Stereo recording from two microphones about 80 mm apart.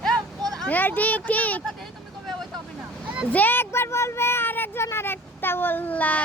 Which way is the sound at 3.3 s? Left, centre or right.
Left.